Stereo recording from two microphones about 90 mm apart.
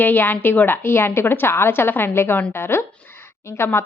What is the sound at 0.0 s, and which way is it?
Speech, 20° left (ahead or behind).